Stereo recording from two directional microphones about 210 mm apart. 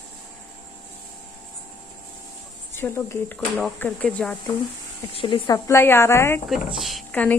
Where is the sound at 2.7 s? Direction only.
10° left (ahead or behind).